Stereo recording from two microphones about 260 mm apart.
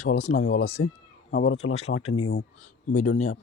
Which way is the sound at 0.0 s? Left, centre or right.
Left.